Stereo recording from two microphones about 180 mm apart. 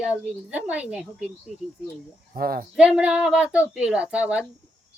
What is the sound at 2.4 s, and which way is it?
Speech, 55° right (ahead or behind).